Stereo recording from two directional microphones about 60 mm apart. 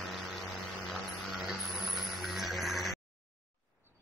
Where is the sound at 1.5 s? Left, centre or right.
Centre.